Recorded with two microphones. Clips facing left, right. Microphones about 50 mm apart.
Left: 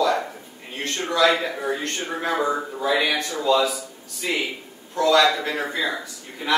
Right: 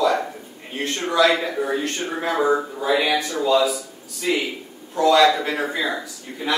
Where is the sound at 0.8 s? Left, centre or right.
Centre.